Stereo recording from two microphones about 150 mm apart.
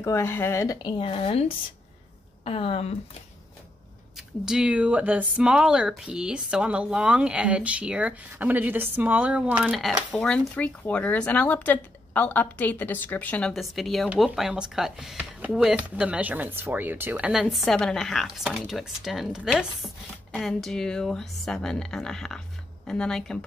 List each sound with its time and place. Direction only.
0.0 s a woman's voice: 20° left (ahead or behind); by 2.9 s 40° left (ahead or behind)
4.5 s speech: 5° right (ahead or behind)